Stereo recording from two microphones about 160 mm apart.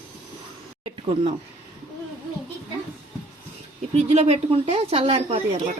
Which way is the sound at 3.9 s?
40° right (ahead or behind).